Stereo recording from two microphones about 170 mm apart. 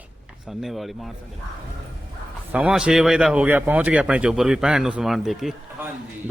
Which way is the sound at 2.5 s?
5° right (ahead or behind).